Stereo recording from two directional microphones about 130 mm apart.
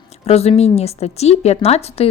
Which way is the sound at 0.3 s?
55° left (ahead or behind).